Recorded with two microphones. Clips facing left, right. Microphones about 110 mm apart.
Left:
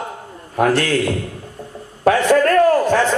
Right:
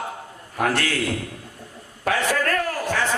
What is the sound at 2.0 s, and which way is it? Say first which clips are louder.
A man's voice: left 9 dB; 35° left (ahead or behind).